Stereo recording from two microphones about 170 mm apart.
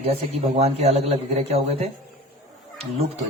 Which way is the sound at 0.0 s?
35° right (ahead or behind).